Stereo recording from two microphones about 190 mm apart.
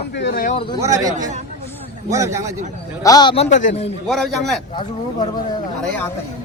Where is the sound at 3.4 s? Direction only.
40° left (ahead or behind).